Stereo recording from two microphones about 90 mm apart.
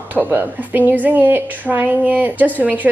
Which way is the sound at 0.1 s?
20° right (ahead or behind).